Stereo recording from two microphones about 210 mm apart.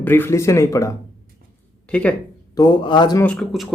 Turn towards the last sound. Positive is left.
turn(degrees=0)  # may be behind; listen again after turning